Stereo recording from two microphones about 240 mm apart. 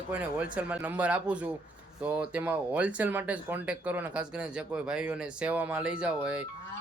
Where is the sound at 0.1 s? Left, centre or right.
Centre.